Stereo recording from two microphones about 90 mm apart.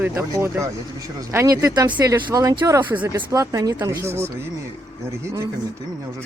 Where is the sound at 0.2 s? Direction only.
35° right (ahead or behind).